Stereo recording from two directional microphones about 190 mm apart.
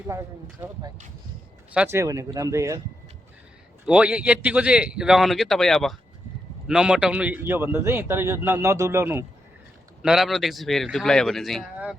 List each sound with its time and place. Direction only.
0.1 s speech: 15° right (ahead or behind)
3.8 s speech: 5° right (ahead or behind)
10.0 s speech: centre (ahead or behind)